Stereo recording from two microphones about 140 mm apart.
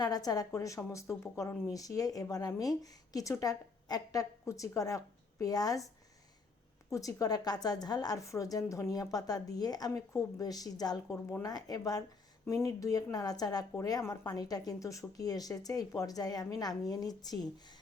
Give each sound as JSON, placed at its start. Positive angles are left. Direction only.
{"t": 0.0, "sound": "speech", "side_deg": 30}
{"t": 6.9, "sound": "speech", "side_deg": 25}